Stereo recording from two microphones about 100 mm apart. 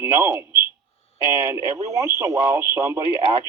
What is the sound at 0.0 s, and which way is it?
A man's voice, 25° right (ahead or behind).